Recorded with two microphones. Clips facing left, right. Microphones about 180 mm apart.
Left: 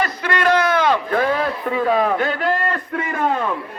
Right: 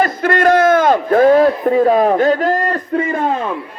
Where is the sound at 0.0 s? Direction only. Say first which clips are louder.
Right 6 dB; 50° right (ahead or behind).